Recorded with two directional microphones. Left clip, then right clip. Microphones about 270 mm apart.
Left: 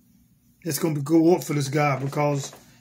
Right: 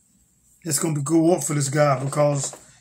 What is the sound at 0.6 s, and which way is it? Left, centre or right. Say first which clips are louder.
Speech: even; centre.